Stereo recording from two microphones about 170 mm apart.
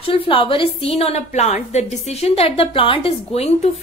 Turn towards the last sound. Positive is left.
turn(degrees=35)  # may be behind; listen again after turning